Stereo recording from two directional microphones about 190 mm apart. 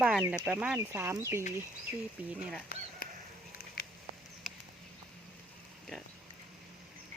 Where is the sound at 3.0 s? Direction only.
50° left (ahead or behind).